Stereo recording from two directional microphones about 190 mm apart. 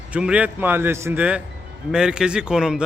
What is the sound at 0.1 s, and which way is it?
Speech, 5° right (ahead or behind).